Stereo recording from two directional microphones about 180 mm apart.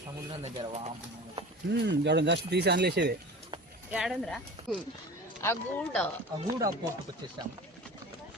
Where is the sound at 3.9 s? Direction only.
Centre (ahead or behind).